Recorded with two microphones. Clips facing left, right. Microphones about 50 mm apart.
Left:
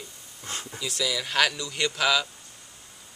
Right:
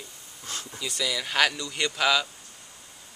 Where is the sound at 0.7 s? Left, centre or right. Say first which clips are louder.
Left 1 dB; centre.